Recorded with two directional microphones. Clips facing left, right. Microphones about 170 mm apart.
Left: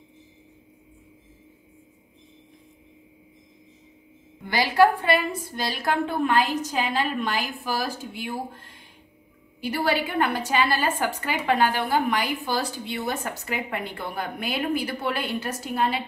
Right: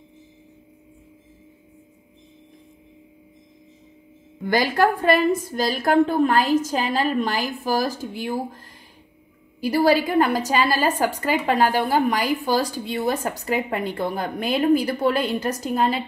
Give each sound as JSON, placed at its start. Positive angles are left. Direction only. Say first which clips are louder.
{"t": 4.5, "sound": "a woman's voice", "louder": "even", "side_deg": -45}